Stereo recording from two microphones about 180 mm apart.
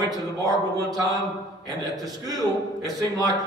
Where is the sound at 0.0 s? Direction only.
20° right (ahead or behind).